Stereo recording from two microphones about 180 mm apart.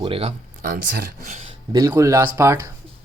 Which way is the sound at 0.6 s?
55° right (ahead or behind).